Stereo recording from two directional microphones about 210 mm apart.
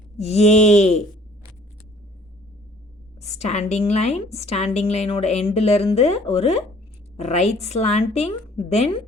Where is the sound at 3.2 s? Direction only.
30° left (ahead or behind).